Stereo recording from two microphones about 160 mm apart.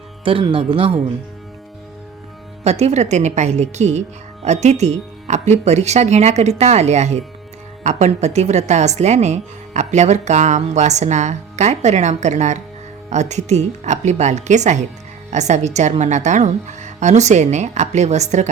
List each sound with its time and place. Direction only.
0.3 s speech: 35° right (ahead or behind)
2.6 s a woman's voice: 40° right (ahead or behind)